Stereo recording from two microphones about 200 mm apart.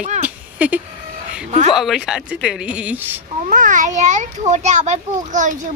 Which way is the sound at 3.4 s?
40° right (ahead or behind).